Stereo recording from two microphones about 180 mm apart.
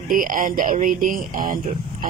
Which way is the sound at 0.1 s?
50° right (ahead or behind).